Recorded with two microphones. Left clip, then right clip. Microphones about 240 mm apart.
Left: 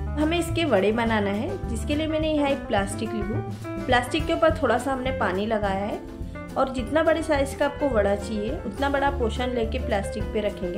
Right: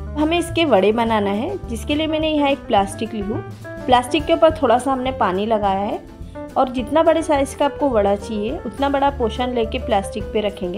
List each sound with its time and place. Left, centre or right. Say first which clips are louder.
0.2 s a woman's voice: right 6 dB; right
4.1 s a woman's voice: right 7 dB; right